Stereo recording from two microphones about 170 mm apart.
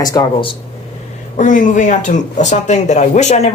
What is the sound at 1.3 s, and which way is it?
Speech, 50° left (ahead or behind).